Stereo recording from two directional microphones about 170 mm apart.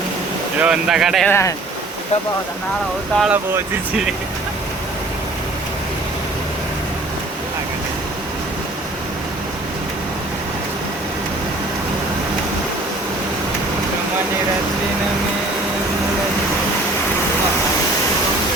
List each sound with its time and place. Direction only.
0.6 s speech: 5° right (ahead or behind)
1.3 s speech: 15° left (ahead or behind)
3.2 s speech: 10° right (ahead or behind)